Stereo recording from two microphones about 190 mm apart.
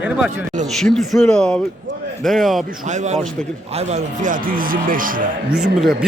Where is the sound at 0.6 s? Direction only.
Centre (ahead or behind).